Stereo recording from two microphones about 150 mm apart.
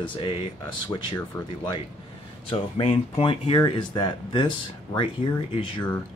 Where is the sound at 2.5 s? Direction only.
40° left (ahead or behind).